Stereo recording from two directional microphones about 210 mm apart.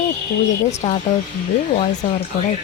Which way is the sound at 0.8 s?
25° left (ahead or behind).